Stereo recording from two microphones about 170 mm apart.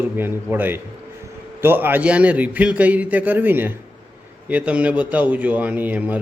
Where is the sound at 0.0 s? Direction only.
10° right (ahead or behind).